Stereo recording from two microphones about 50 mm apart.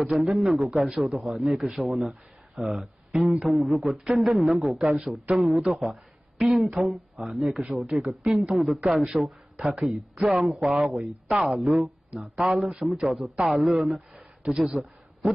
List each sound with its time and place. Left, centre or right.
0.2 s speech: centre
7.7 s speech: right
8.0 s speech: centre
10.1 s speech: right
10.6 s speech: centre
14.1 s a sound: centre